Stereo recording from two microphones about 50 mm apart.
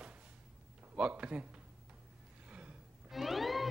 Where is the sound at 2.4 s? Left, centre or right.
Right.